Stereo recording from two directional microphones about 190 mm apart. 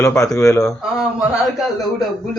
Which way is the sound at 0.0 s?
5° left (ahead or behind).